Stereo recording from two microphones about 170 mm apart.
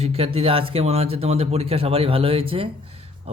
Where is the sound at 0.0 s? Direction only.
35° right (ahead or behind).